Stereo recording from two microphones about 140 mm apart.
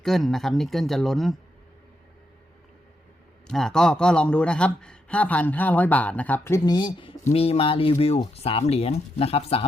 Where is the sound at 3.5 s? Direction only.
5° left (ahead or behind); by 6.7 s 20° left (ahead or behind).